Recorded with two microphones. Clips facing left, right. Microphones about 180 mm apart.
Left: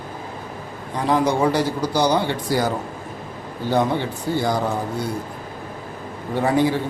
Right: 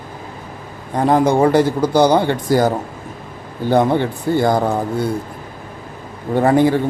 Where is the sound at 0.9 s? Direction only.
50° right (ahead or behind).